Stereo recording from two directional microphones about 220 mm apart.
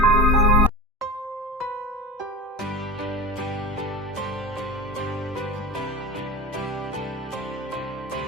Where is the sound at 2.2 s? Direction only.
Centre (ahead or behind).